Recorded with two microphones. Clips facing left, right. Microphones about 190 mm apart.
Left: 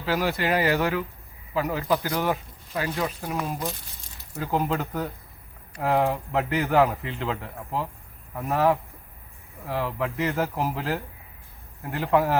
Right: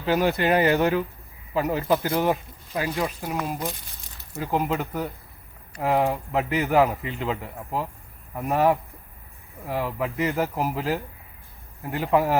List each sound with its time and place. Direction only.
0.0 s a man's voice: 20° right (ahead or behind)
3.3 s a man's voice: centre (ahead or behind)
10.6 s speech: 5° right (ahead or behind)
12.1 s a man's voice: 10° right (ahead or behind)